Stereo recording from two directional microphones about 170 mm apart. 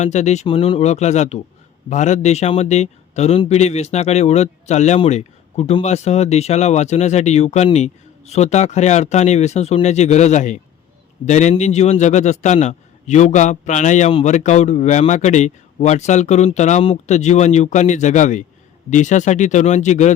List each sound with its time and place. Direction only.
0.0 s a man's voice: 40° left (ahead or behind)